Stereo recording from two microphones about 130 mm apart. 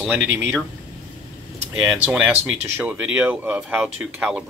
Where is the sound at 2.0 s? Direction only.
10° right (ahead or behind).